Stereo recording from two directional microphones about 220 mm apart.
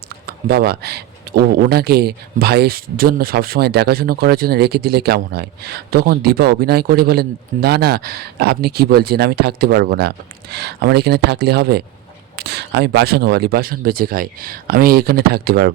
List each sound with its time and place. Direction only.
0.3 s a man's voice: 45° right (ahead or behind)